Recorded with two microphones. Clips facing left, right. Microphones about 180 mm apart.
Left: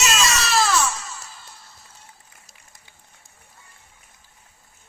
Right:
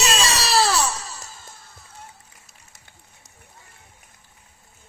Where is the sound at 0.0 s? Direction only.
35° right (ahead or behind); by 2.0 s 50° right (ahead or behind).